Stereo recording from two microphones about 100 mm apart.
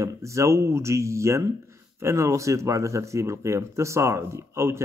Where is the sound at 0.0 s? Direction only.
30° right (ahead or behind).